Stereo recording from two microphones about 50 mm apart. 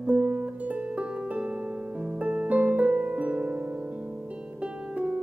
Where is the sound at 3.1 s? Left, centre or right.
Right.